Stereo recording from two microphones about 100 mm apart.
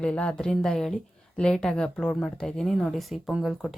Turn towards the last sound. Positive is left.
turn(degrees=-5)  # may be behind; listen again after turning